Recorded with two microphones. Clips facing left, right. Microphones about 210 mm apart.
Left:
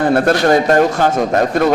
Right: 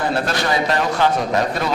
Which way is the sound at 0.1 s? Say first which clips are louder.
Left 9 dB; 55° left (ahead or behind).